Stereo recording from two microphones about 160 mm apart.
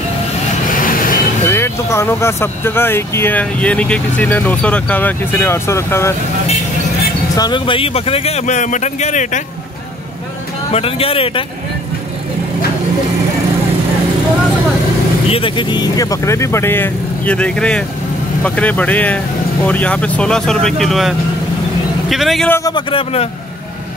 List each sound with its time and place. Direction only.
0.7 s vehicle: 60° left (ahead or behind)
1.5 s speech: 15° left (ahead or behind)
7.3 s speech: 30° left (ahead or behind); by 9.4 s 50° left (ahead or behind)
10.7 s speech: 35° left (ahead or behind)
15.2 s speech: 35° left (ahead or behind); by 21.1 s centre (ahead or behind)
22.1 s a man's voice: centre (ahead or behind)
22.5 s a man's voice: 20° left (ahead or behind)